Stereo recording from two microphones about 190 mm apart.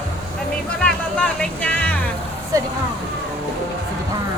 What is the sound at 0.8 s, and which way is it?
Music, 5° left (ahead or behind).